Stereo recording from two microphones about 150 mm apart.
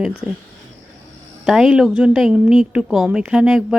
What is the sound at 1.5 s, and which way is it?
A woman's voice, 5° right (ahead or behind).